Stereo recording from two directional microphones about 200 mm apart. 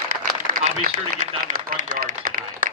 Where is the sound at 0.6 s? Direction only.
35° right (ahead or behind).